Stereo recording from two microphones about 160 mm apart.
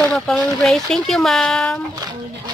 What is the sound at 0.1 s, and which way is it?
Speech, 5° left (ahead or behind).